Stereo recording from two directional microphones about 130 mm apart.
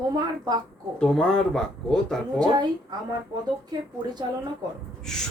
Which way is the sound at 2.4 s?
30° right (ahead or behind).